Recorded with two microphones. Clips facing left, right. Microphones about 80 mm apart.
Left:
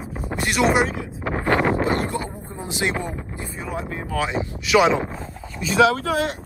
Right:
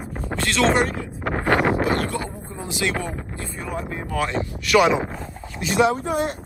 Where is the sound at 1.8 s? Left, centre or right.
Left.